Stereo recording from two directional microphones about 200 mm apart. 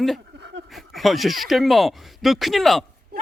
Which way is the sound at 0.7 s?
Centre (ahead or behind).